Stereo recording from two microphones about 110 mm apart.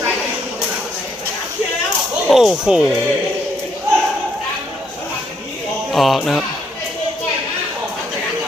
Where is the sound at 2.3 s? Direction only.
5° right (ahead or behind).